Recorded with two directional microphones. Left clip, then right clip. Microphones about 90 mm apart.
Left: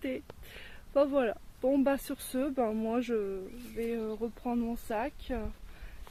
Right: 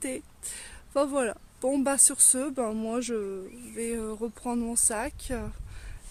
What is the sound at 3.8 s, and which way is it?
Speech, 35° right (ahead or behind).